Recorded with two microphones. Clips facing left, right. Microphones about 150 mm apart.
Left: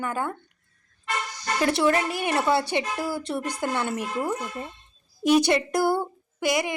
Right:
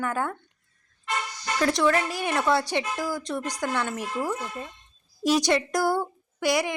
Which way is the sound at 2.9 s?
30° left (ahead or behind).